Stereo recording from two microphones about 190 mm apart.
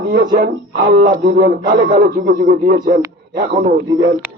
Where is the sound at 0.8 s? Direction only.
40° right (ahead or behind).